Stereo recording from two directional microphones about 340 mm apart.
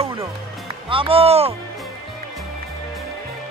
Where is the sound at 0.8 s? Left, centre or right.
Centre.